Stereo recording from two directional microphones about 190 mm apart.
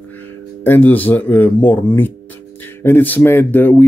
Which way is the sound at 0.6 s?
10° left (ahead or behind).